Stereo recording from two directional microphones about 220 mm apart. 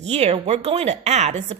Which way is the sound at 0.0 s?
30° right (ahead or behind).